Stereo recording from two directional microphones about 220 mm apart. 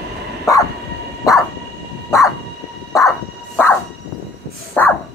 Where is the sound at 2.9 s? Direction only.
15° left (ahead or behind).